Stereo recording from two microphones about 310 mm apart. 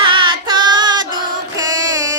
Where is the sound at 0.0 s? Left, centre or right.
Centre.